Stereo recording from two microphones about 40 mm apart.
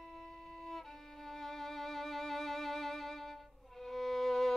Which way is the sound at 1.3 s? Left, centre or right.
Centre.